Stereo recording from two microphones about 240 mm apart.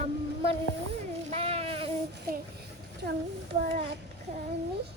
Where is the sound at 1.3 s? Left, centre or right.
Right.